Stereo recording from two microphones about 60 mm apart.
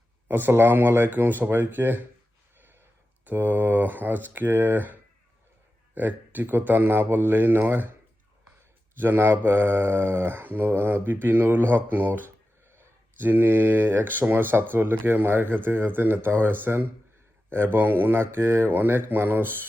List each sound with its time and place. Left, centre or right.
0.3 s speech: right
2.6 s a sound: right
3.2 s speech: right
9.0 s speech: right
12.6 s a sound: right
13.2 s speech: right